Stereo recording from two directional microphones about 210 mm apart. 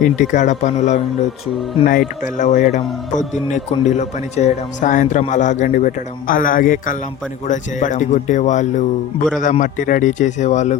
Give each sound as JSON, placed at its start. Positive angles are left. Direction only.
{"t": 0.0, "sound": "speech", "side_deg": 35}